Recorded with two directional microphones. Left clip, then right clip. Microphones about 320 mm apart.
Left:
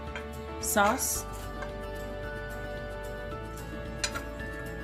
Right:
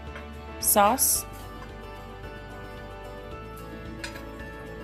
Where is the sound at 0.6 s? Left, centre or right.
Centre.